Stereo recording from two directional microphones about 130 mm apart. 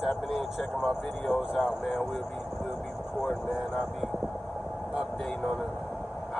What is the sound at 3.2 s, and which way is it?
Speech, centre (ahead or behind).